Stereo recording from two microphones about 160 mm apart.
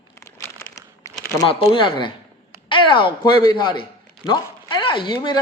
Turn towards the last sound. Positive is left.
turn(degrees=25)  # may be behind; listen again after turning